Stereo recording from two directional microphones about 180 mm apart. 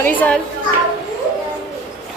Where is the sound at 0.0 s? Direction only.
10° left (ahead or behind).